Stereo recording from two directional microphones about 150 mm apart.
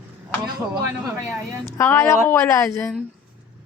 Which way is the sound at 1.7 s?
15° left (ahead or behind).